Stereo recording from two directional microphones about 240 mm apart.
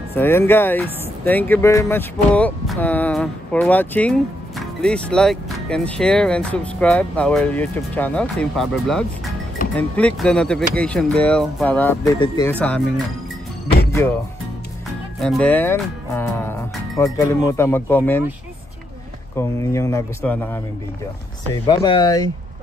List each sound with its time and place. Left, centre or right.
0.1 s speech: centre
15.1 s speech: centre
19.3 s speech: centre
21.8 s speech: centre